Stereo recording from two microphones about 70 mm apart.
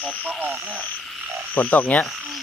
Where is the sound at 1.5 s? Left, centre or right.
Left.